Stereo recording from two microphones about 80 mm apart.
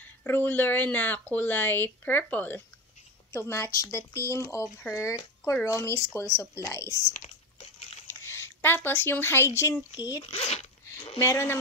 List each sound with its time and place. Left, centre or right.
0.2 s speech: left
3.3 s speech: left
9.9 s speech: left
10.9 s speech: left